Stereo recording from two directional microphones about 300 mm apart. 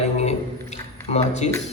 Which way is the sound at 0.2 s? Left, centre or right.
Left.